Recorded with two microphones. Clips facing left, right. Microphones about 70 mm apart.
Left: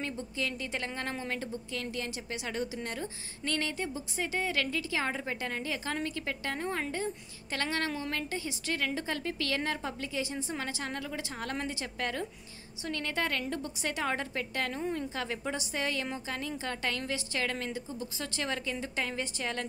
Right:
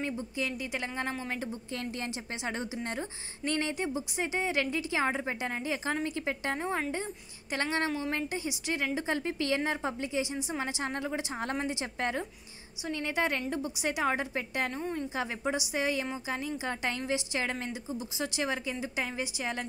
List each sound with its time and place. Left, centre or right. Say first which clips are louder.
0.0 s a woman's voice: right 2 dB; centre
1.7 s a woman's voice: even; right
14.7 s a woman's voice: even; centre
15.1 s a woman's voice: right 3 dB; centre